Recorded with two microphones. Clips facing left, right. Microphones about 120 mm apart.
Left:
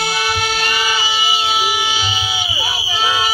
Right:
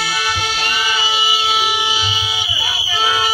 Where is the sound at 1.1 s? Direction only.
5° left (ahead or behind).